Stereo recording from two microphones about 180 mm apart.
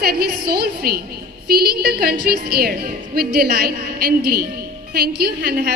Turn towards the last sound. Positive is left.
turn(degrees=-60)  # may be behind; listen again after turning